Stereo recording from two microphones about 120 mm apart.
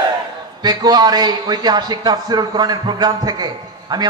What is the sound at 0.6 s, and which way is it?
A man's voice, 35° right (ahead or behind).